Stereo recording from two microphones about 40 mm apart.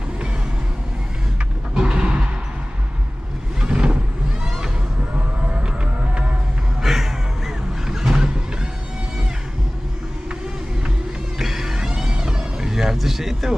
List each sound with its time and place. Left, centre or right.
1.8 s music: right
3.6 s vehicle: right
6.8 s vehicle: centre
11.3 s vehicle: centre
12.9 s a sound: centre